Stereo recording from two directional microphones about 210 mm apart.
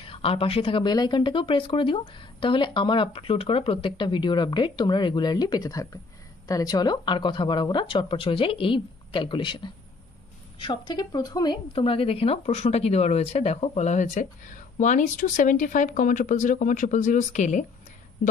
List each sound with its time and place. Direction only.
0.0 s a woman's voice: 25° left (ahead or behind)